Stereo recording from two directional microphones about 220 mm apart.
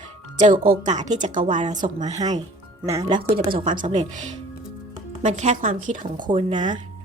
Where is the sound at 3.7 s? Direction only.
35° right (ahead or behind).